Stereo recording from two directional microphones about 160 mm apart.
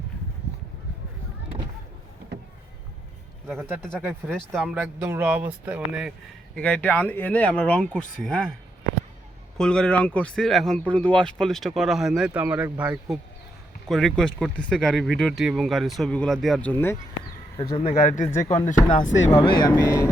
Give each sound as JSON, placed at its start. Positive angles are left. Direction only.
{"t": 4.5, "sound": "speech", "side_deg": -10}
{"t": 6.6, "sound": "speech", "side_deg": 10}
{"t": 9.6, "sound": "speech", "side_deg": 5}
{"t": 13.8, "sound": "speech", "side_deg": 0}
{"t": 17.6, "sound": "speech", "side_deg": 30}
{"t": 18.0, "sound": "speech", "side_deg": 50}
{"t": 19.4, "sound": "speech", "side_deg": 30}